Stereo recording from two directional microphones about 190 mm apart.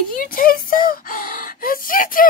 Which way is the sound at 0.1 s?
50° left (ahead or behind).